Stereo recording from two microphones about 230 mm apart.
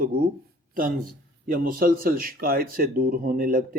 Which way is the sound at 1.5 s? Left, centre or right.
Right.